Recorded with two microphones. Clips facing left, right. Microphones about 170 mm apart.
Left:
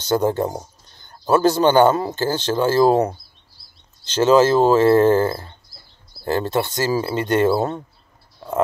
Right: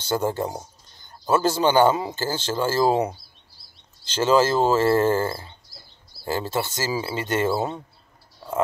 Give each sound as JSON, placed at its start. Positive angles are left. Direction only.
{"t": 0.1, "sound": "a man's voice", "side_deg": 50}
{"t": 4.1, "sound": "a man's voice", "side_deg": 50}